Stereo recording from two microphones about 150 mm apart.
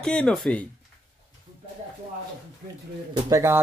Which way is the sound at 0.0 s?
5° left (ahead or behind).